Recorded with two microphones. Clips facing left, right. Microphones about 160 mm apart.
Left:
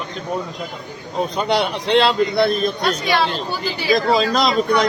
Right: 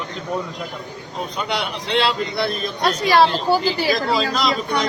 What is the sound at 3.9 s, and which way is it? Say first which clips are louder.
Speech: left 4 dB; 40° left (ahead or behind).